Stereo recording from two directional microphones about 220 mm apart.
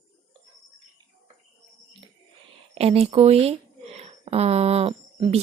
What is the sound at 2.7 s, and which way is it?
Speech, 25° right (ahead or behind).